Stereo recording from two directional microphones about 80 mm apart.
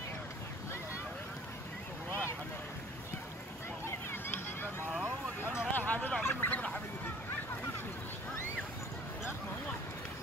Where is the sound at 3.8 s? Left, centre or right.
Left.